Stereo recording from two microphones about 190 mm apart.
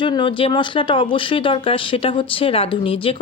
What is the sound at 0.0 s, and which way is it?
Speech, 25° left (ahead or behind).